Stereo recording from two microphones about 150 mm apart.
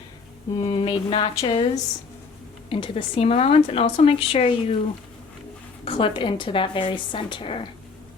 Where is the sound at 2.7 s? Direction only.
35° left (ahead or behind).